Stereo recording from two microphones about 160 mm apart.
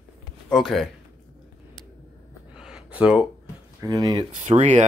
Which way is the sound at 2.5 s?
5° right (ahead or behind).